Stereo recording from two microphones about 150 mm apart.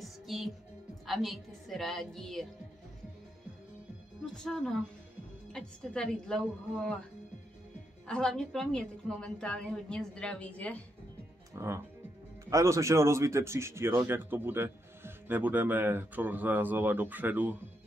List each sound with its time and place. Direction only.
0.0 s music: centre (ahead or behind)
1.0 s a woman's voice: centre (ahead or behind)
4.2 s a woman's voice: 5° left (ahead or behind)
8.1 s a woman's voice: 5° left (ahead or behind)
11.5 s speech: 20° right (ahead or behind)